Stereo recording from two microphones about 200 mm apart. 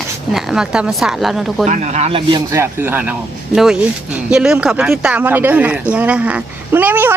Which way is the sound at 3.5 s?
Centre (ahead or behind).